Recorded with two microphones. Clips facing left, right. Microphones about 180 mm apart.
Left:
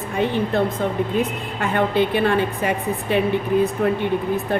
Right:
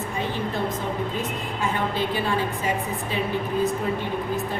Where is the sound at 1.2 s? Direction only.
60° left (ahead or behind).